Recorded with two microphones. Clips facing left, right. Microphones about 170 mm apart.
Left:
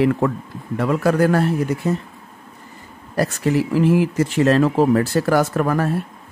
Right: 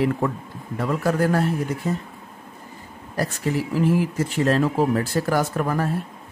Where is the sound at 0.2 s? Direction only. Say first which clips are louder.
Left 4 dB; 90° left.